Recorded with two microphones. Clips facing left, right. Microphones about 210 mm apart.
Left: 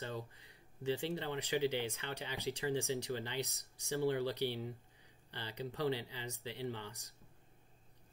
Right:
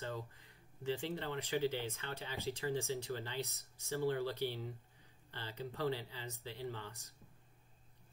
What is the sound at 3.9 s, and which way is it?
Speech, 15° left (ahead or behind).